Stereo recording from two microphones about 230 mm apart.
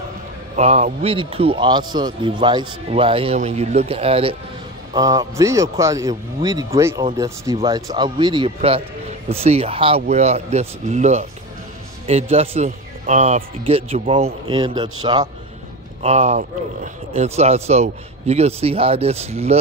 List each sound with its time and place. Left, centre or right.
0.6 s a man's voice: right
4.9 s a man's voice: centre
16.0 s a man's voice: right